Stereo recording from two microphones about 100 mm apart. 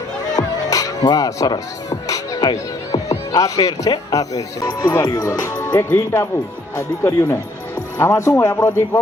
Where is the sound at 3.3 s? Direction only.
40° left (ahead or behind).